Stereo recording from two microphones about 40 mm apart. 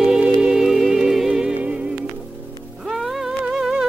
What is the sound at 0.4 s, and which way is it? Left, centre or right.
Music, centre.